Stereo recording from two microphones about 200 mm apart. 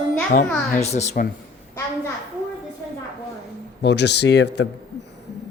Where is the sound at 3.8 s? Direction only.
60° left (ahead or behind).